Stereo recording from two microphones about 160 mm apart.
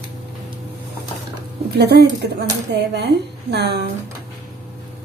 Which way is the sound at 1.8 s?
90° right.